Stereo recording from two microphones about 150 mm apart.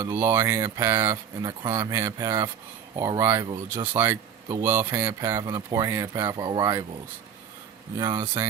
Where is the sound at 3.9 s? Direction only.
15° right (ahead or behind).